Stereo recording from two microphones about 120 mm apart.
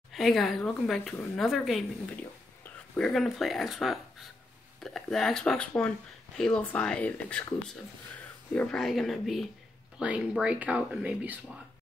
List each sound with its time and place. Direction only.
0.1 s speech: centre (ahead or behind)
2.6 s a sound: 15° left (ahead or behind)
3.1 s speech: centre (ahead or behind)